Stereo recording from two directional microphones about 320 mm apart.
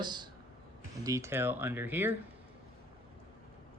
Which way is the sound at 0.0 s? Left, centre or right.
Centre.